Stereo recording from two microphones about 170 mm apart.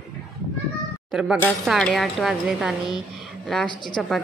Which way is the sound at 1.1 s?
5° right (ahead or behind).